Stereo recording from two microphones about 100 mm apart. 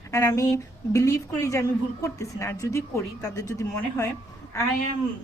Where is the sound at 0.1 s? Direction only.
30° left (ahead or behind).